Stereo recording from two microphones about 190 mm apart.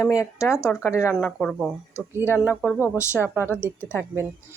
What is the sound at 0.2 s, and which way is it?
Speech, 15° left (ahead or behind).